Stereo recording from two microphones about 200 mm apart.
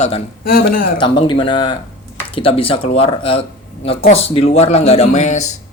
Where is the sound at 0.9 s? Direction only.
25° left (ahead or behind).